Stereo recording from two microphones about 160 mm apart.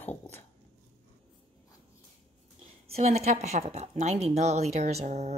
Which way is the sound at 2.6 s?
40° right (ahead or behind).